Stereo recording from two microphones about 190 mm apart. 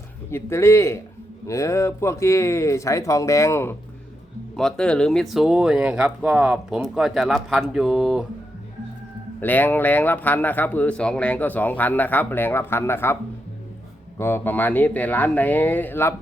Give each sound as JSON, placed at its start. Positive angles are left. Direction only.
{"t": 0.3, "sound": "speech", "side_deg": 15}
{"t": 9.4, "sound": "speech", "side_deg": 10}
{"t": 14.2, "sound": "speech", "side_deg": 15}